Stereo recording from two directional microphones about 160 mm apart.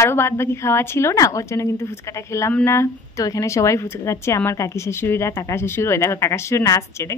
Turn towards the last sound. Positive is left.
turn(degrees=20)  # may be behind; listen again after turning